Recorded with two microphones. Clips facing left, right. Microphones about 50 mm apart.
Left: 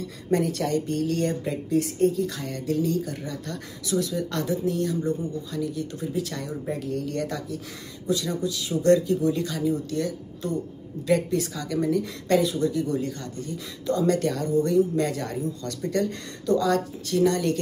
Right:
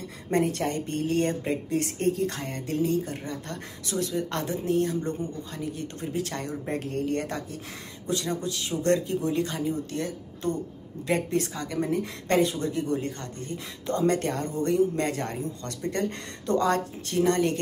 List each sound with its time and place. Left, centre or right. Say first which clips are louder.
0.0 s speech: left 1 dB; right